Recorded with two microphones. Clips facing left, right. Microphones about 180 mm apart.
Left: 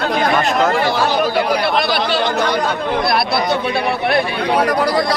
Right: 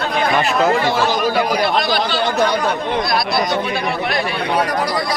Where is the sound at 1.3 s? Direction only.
60° left (ahead or behind).